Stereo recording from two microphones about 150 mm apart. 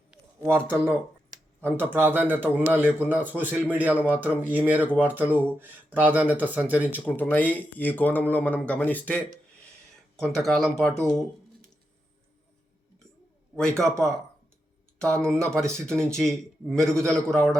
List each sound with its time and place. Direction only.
0.1 s a sound: 15° right (ahead or behind)
0.6 s speech: 10° left (ahead or behind)
1.9 s speech: 15° right (ahead or behind)
6.9 s speech: 10° left (ahead or behind)
13.6 s speech: 5° left (ahead or behind)
14.9 s speech: 5° left (ahead or behind)